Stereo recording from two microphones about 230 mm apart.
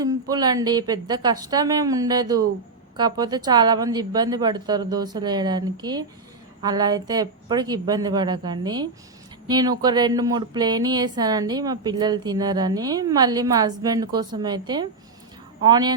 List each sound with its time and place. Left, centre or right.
0.0 s speech: centre